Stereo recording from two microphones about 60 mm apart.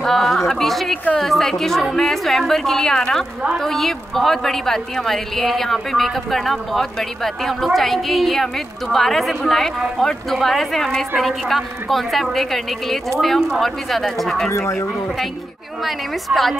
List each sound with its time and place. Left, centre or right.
0.0 s a sound: centre
0.5 s a woman's voice: centre
14.5 s speech: left
15.8 s a woman's voice: centre